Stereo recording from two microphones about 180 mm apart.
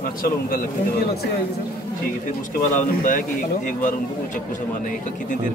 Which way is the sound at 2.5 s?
50° left (ahead or behind).